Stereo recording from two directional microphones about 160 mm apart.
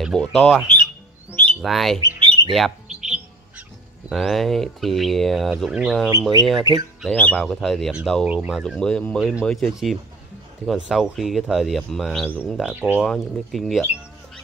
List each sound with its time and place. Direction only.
0.0 s speech: centre (ahead or behind)
2.0 s squawk: 25° right (ahead or behind)
2.5 s bird: centre (ahead or behind)
4.1 s speech: centre (ahead or behind)
6.7 s speech: 20° right (ahead or behind)
7.0 s speech: 5° left (ahead or behind)